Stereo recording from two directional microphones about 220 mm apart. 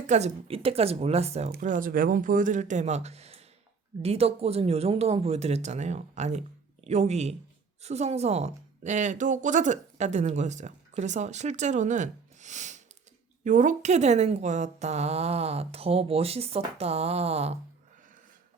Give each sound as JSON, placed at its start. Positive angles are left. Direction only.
{"t": 0.1, "sound": "a woman's voice", "side_deg": -30}
{"t": 1.5, "sound": "a woman's voice", "side_deg": -40}